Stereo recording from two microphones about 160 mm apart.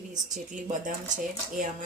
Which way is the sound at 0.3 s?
55° right (ahead or behind).